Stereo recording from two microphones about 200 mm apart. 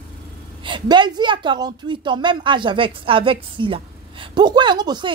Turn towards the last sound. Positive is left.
turn(degrees=-20)  # may be behind; listen again after turning